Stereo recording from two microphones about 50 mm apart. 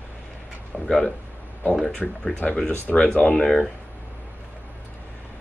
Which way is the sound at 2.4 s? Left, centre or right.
Left.